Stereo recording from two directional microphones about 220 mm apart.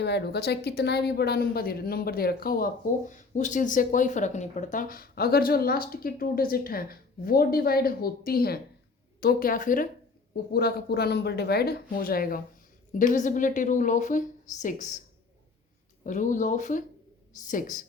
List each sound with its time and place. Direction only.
0.0 s a woman's voice: 50° left (ahead or behind)
16.0 s a woman's voice: 35° left (ahead or behind)